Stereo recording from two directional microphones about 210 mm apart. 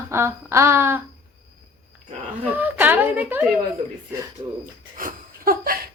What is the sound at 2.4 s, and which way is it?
Speech, 10° right (ahead or behind).